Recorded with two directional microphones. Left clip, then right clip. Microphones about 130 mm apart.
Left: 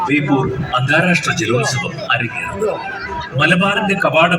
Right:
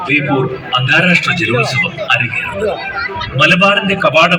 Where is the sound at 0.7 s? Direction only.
30° right (ahead or behind).